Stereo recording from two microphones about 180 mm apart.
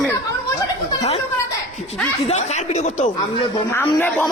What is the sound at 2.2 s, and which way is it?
Speech, 40° left (ahead or behind).